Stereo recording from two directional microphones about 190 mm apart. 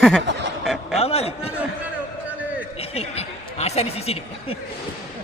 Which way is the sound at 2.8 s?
30° left (ahead or behind).